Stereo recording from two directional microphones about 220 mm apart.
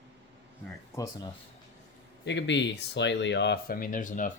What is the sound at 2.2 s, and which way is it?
Speech, 55° left (ahead or behind).